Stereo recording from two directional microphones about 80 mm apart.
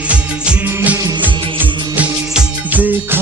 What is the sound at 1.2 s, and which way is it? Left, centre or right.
Music of bollywood, right.